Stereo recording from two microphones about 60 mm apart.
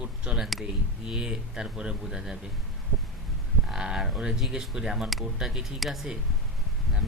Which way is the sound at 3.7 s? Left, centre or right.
Centre.